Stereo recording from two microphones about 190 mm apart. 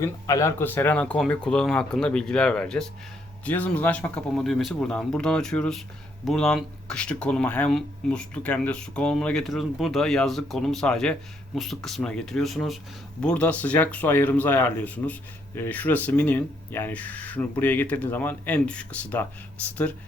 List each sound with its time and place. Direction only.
0.0 s speech: 15° left (ahead or behind)